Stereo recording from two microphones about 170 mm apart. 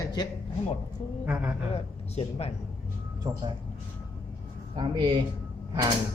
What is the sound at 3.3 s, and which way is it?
Speech, 25° right (ahead or behind).